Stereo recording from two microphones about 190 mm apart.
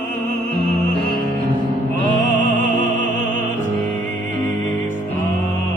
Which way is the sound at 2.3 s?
40° right (ahead or behind).